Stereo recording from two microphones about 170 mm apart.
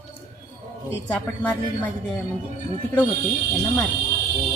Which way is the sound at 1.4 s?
10° left (ahead or behind).